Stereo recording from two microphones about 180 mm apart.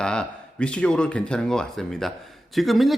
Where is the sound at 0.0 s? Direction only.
5° left (ahead or behind).